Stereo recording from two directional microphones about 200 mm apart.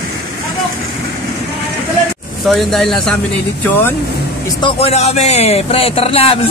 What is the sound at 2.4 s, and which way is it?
Speech, centre (ahead or behind).